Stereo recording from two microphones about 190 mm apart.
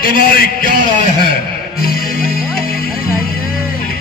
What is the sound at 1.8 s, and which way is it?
Music, 50° left (ahead or behind).